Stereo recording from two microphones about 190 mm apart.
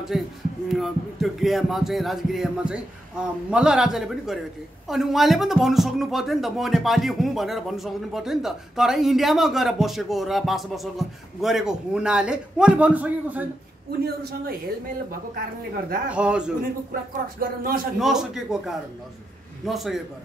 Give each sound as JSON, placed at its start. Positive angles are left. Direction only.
{"t": 0.1, "sound": "speech", "side_deg": 0}
{"t": 16.1, "sound": "speech", "side_deg": -5}
{"t": 16.9, "sound": "speech", "side_deg": -50}
{"t": 17.9, "sound": "speech", "side_deg": 0}